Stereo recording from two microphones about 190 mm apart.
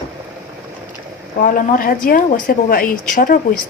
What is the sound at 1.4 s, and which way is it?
Speech, 45° left (ahead or behind).